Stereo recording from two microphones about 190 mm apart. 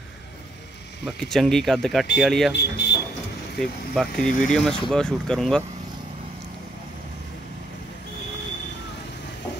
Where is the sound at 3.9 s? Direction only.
Centre (ahead or behind).